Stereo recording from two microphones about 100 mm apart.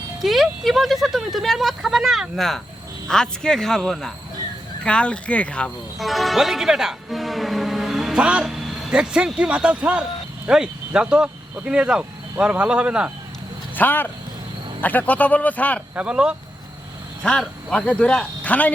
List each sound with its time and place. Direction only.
0.2 s speech: centre (ahead or behind)
6.0 s speech: centre (ahead or behind)
13.7 s speech: 20° left (ahead or behind)
16.0 s speech: 10° right (ahead or behind)
17.2 s speech: 10° left (ahead or behind)